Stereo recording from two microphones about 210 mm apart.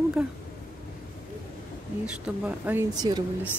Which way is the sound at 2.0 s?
5° right (ahead or behind).